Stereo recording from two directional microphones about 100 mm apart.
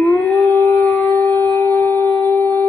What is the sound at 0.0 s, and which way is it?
Howl, 15° left (ahead or behind).